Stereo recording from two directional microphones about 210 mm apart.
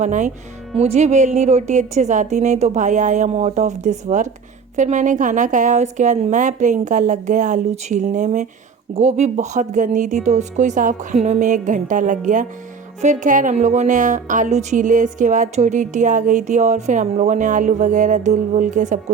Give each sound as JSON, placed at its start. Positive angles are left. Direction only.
{"t": 0.0, "sound": "speech", "side_deg": -35}